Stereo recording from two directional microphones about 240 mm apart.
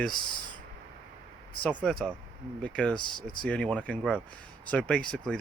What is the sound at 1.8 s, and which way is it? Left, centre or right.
Speech, centre.